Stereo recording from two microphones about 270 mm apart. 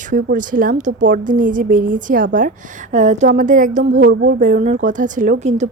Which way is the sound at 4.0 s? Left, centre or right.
Right.